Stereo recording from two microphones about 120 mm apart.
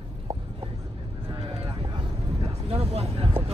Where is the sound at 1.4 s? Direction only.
50° right (ahead or behind).